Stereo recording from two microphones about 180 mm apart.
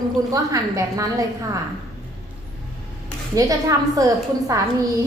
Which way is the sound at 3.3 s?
20° right (ahead or behind).